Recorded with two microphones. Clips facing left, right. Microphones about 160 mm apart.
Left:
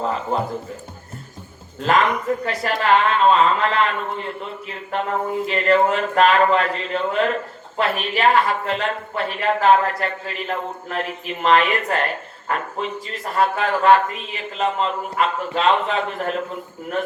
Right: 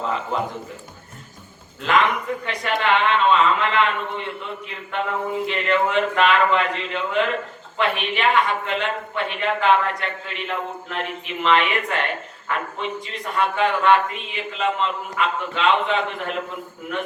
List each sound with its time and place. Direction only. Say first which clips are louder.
0.0 s speech: left 2 dB; 40° left (ahead or behind)
1.8 s speech: left 2 dB; 40° left (ahead or behind)